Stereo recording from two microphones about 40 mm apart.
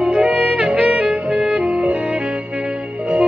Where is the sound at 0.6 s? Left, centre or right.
Right.